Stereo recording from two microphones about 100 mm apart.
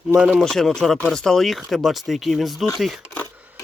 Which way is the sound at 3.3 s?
15° right (ahead or behind).